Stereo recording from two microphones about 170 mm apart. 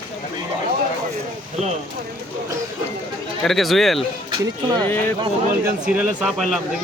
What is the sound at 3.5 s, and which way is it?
Speech, centre (ahead or behind).